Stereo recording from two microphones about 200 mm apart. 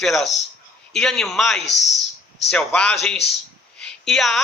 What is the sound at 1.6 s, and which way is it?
Speech, 60° left (ahead or behind).